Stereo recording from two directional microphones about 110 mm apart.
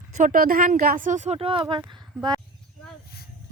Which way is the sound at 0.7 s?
90° right.